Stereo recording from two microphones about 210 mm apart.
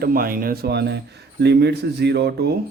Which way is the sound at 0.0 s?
45° right (ahead or behind).